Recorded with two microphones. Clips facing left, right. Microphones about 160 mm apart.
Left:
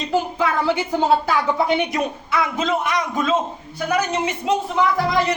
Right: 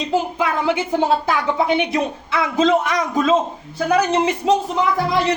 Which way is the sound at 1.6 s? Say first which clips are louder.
Right 2 dB; 20° right (ahead or behind).